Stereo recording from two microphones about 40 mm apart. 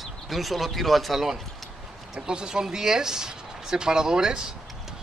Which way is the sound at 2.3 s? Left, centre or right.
Centre.